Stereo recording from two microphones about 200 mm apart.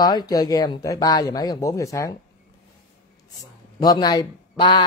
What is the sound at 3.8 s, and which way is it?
Speech, 20° left (ahead or behind).